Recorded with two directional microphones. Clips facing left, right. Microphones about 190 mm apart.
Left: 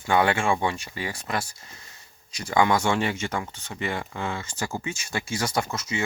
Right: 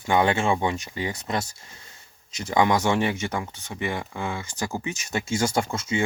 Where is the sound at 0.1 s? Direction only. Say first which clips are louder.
Right 1 dB; 20° right (ahead or behind).